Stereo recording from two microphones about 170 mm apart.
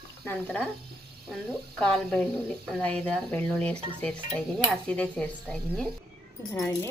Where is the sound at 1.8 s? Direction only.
5° left (ahead or behind).